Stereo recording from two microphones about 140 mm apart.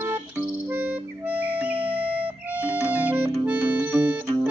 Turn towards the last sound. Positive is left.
turn(degrees=-10)  # may be behind; listen again after turning